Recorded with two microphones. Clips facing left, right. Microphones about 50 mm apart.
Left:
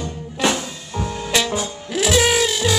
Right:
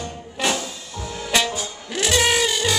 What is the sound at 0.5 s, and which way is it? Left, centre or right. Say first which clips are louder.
Music: left 4 dB; left.